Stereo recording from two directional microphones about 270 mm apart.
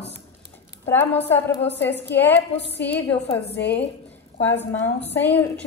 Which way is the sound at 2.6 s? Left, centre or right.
Left.